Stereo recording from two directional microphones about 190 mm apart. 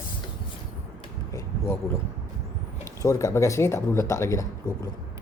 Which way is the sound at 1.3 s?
15° left (ahead or behind).